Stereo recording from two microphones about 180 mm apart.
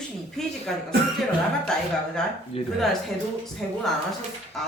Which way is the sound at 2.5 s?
35° left (ahead or behind).